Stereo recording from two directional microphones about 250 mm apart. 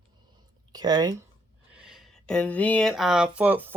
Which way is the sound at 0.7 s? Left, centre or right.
Centre.